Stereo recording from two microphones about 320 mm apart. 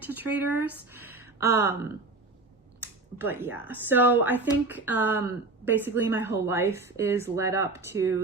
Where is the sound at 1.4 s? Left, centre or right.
Left.